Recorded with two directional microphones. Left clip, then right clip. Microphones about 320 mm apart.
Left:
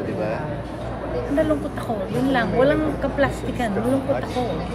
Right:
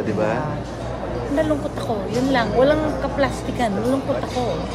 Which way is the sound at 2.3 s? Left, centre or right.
Centre.